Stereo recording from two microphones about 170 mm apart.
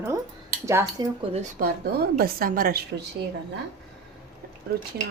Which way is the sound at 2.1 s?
60° right (ahead or behind).